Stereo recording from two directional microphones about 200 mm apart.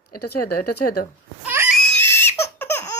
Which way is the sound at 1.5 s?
10° right (ahead or behind).